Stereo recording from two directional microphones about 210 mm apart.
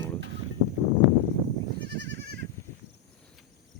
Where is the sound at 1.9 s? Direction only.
55° right (ahead or behind).